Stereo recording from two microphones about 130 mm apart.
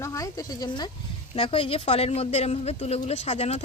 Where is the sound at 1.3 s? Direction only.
45° left (ahead or behind).